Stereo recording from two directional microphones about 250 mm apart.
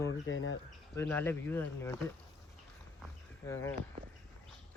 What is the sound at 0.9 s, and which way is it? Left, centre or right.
Speech, centre.